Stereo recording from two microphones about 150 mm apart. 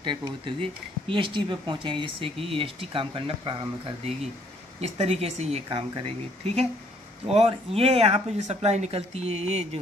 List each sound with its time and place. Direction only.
0.0 s speech: 30° right (ahead or behind)
4.7 s speech: 45° right (ahead or behind)